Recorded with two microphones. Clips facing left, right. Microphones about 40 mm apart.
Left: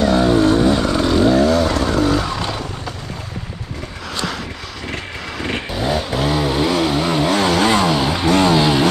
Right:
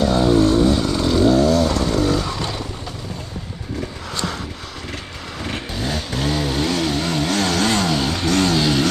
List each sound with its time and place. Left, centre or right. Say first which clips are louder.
0.0 s vehicle: left 2 dB; centre
4.9 s vehicle: left 4 dB; left
5.7 s vehicle: left 7 dB; centre